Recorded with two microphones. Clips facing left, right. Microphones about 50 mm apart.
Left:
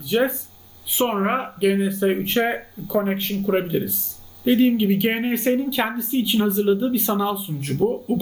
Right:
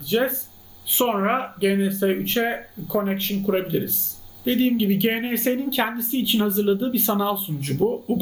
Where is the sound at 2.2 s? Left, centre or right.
Centre.